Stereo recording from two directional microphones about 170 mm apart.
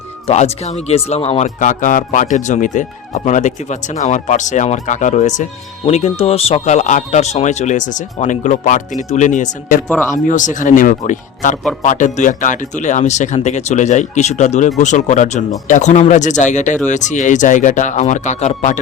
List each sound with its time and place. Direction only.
0.3 s speech: 40° left (ahead or behind)